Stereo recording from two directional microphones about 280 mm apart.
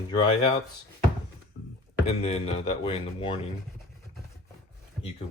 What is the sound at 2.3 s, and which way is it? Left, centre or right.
Speech, left.